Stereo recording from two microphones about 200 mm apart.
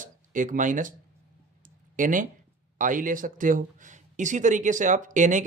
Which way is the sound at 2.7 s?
40° right (ahead or behind).